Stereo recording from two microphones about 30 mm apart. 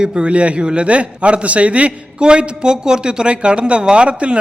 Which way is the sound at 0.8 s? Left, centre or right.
Right.